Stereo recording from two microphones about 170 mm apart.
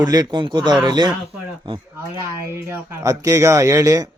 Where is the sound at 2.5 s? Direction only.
15° right (ahead or behind).